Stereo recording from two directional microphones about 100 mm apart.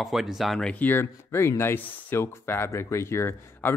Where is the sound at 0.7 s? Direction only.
20° left (ahead or behind).